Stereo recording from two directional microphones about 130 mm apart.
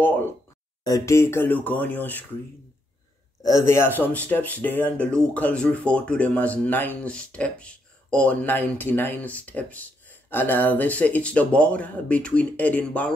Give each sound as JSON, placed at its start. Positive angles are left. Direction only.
{"t": 0.0, "sound": "a sound", "side_deg": 15}
{"t": 0.8, "sound": "speech", "side_deg": 25}
{"t": 3.4, "sound": "speech", "side_deg": 20}